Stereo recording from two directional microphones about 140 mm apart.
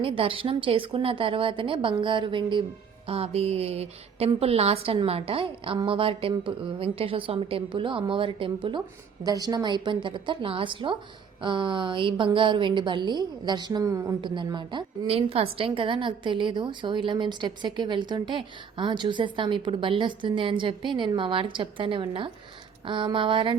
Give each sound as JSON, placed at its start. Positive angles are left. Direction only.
{"t": 0.0, "sound": "a woman's voice", "side_deg": -40}
{"t": 9.2, "sound": "a woman's voice", "side_deg": -25}
{"t": 14.2, "sound": "a woman's voice", "side_deg": -35}